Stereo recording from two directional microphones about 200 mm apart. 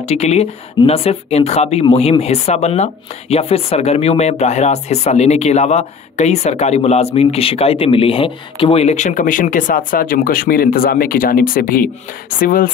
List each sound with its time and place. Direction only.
0.0 s speech: 35° left (ahead or behind)